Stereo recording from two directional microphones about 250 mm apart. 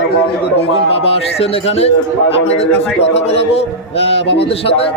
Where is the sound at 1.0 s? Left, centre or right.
Left.